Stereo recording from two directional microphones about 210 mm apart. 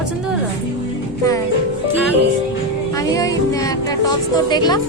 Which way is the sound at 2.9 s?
15° left (ahead or behind).